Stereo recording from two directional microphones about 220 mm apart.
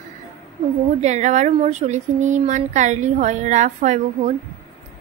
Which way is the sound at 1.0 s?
30° right (ahead or behind).